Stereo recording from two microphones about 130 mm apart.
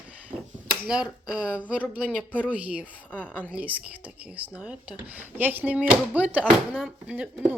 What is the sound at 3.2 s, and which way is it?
Speech, 10° right (ahead or behind).